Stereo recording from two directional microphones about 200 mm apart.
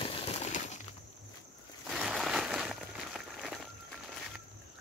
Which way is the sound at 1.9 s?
Centre (ahead or behind).